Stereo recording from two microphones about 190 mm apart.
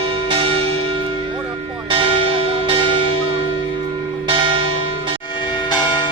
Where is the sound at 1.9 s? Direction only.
30° right (ahead or behind).